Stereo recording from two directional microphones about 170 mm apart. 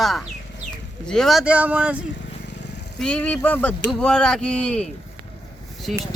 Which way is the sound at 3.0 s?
5° left (ahead or behind).